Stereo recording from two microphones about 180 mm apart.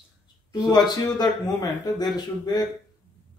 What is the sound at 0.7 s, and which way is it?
A man's voice, 20° left (ahead or behind).